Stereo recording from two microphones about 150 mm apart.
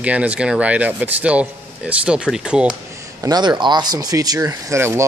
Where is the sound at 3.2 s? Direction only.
25° right (ahead or behind).